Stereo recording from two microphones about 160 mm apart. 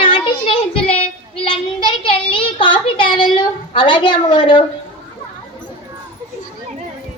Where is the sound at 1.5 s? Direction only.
30° left (ahead or behind).